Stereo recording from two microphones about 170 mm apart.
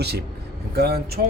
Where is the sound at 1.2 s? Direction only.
60° right (ahead or behind).